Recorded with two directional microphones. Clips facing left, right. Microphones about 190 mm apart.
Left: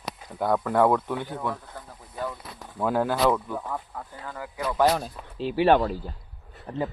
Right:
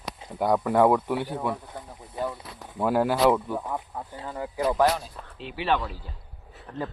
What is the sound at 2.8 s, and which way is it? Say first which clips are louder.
Speech: right 2 dB; 5° right (ahead or behind).